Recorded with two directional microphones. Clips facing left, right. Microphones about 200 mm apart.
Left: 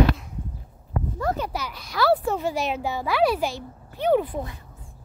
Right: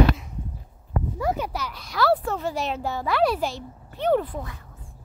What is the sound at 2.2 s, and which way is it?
A child's voice, 15° left (ahead or behind).